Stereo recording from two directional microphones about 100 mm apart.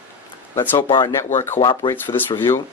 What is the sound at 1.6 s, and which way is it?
Speech, 50° left (ahead or behind).